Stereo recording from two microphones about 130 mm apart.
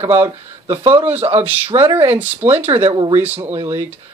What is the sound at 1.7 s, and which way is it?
Speech, 45° right (ahead or behind).